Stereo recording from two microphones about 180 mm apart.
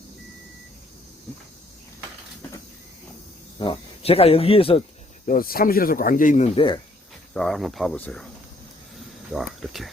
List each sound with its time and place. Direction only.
3.6 s speech: 30° left (ahead or behind)
5.2 s speech: 50° left (ahead or behind); by 6.7 s 35° left (ahead or behind)
7.3 s speech: centre (ahead or behind)
9.3 s speech: centre (ahead or behind)